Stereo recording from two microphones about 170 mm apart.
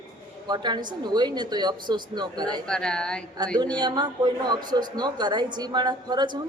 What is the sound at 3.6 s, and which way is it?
A woman's voice, 25° right (ahead or behind).